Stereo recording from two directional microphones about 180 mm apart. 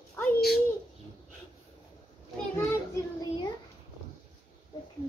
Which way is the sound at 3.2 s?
25° left (ahead or behind).